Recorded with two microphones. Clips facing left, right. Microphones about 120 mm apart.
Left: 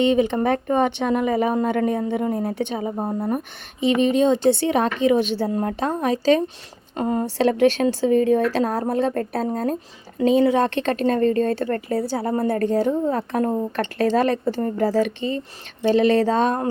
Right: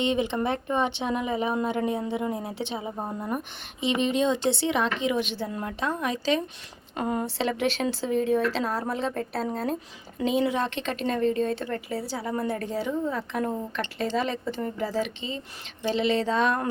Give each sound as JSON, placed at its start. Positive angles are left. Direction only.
{"t": 0.0, "sound": "speech", "side_deg": 45}
{"t": 5.1, "sound": "a woman's voice", "side_deg": 35}
{"t": 7.4, "sound": "speech", "side_deg": 50}